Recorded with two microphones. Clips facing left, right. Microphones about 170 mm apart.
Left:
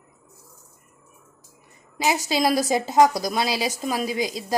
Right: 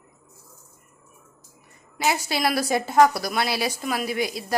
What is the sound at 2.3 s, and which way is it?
A woman's voice, 20° left (ahead or behind).